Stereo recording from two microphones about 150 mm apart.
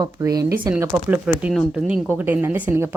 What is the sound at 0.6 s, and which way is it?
A woman's voice, 15° right (ahead or behind).